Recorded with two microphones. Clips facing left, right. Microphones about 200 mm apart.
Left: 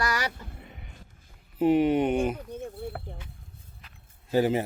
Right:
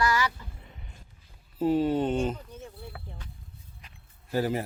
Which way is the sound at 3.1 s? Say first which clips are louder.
Left 3 dB; 55° left (ahead or behind).